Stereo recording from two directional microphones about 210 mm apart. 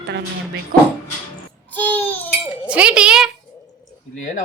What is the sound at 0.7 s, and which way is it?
Speech, 40° right (ahead or behind).